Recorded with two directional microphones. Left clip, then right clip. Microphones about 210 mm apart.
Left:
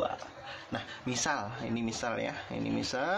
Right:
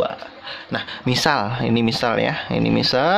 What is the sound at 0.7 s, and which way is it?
Speech, 45° right (ahead or behind).